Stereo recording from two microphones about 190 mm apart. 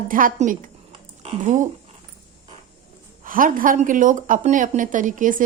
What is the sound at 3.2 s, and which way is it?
A woman's voice, 45° right (ahead or behind).